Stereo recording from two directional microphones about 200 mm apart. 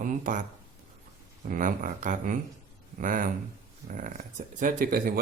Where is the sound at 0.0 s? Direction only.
40° right (ahead or behind).